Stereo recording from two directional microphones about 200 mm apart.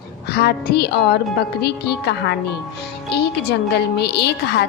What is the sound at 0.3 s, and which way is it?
A woman's voice, 55° left (ahead or behind).